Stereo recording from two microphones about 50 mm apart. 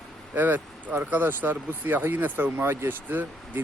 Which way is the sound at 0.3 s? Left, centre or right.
Right.